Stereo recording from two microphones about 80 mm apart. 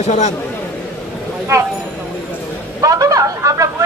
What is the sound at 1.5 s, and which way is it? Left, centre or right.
Speech, right.